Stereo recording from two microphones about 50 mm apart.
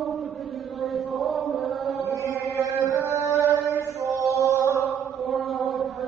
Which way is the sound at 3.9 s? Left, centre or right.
Right.